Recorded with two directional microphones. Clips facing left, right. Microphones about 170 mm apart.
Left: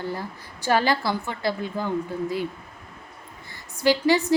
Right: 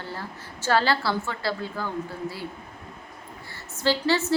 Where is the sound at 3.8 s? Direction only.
15° left (ahead or behind).